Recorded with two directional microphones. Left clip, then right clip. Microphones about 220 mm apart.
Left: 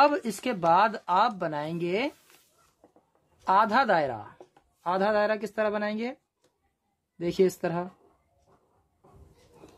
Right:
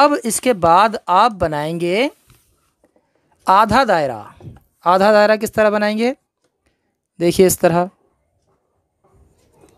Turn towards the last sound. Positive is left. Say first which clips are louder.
# right 13 dB
turn(degrees=-50)  # may be behind; listen again after turning